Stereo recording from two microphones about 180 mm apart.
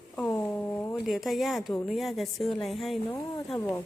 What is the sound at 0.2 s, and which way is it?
Speech, 5° left (ahead or behind).